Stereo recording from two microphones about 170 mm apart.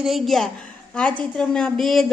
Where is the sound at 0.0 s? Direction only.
Centre (ahead or behind).